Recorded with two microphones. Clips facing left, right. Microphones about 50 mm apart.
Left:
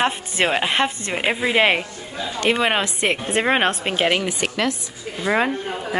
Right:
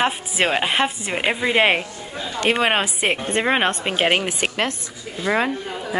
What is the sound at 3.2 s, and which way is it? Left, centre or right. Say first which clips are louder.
Speech: left 1 dB; centre.